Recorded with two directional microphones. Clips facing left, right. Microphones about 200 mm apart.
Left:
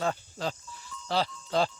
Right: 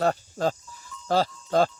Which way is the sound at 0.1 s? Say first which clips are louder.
Right 7 dB; 45° right (ahead or behind).